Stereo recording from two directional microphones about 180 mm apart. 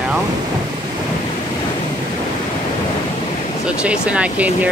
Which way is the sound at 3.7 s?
5° right (ahead or behind).